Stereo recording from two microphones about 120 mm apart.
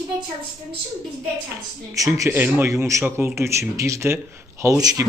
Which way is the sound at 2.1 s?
20° right (ahead or behind).